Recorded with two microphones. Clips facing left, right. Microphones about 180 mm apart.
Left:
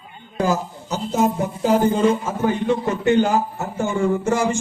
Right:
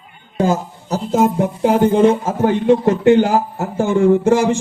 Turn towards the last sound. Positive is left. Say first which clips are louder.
# right 7 dB
turn(degrees=-55)  # may be behind; listen again after turning